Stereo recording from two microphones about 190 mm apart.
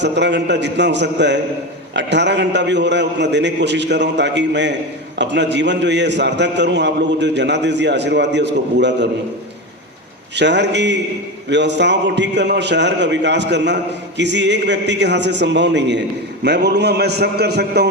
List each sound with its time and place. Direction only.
0.0 s a man's voice: 65° right (ahead or behind)
10.3 s a man's voice: 65° right (ahead or behind)